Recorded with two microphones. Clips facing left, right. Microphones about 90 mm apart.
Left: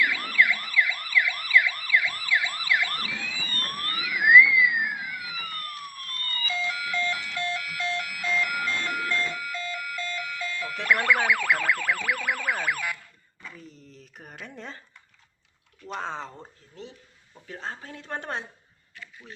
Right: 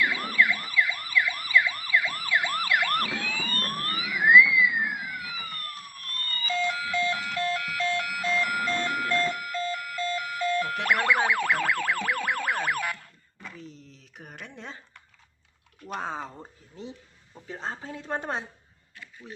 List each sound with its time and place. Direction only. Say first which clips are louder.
0.0 s emergency vehicle: left 1 dB; 30° right (ahead or behind); by 3.5 s 60° right (ahead or behind)
3.5 s emergency vehicle: right 2 dB; 35° right (ahead or behind)
4.4 s music: left 2 dB; 20° right (ahead or behind)
6.5 s alarm clock: right 3 dB; 30° right (ahead or behind)
11.0 s music: right 1 dB; 30° right (ahead or behind); by 13.1 s 45° right (ahead or behind)
13.6 s a sound: right 1 dB; 5° left (ahead or behind)
16.0 s a sound: even; 10° right (ahead or behind)
17.3 s speech: right 1 dB; 20° right (ahead or behind)